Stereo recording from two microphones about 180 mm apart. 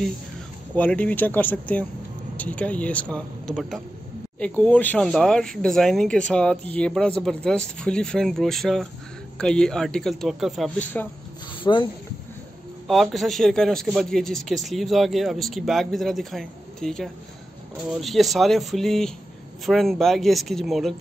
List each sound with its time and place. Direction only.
0.7 s a man's voice: 10° left (ahead or behind)
11.6 s speech: 25° left (ahead or behind)
12.8 s a man's voice: centre (ahead or behind)